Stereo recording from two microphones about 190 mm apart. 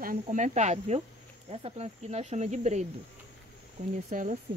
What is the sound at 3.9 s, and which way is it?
Speech, 40° right (ahead or behind).